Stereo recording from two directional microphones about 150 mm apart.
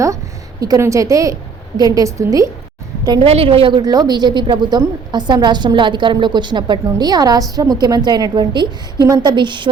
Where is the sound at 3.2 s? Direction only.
40° right (ahead or behind).